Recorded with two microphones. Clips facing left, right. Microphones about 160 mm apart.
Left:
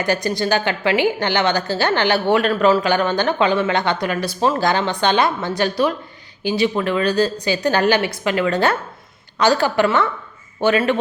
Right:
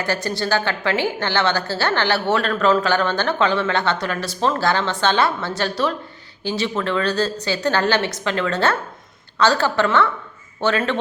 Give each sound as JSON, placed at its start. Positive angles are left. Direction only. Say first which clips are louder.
{"t": 0.0, "sound": "a woman's voice", "louder": "left 3 dB", "side_deg": 15}